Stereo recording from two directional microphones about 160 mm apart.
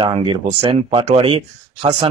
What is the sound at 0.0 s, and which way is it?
Speech, 35° right (ahead or behind).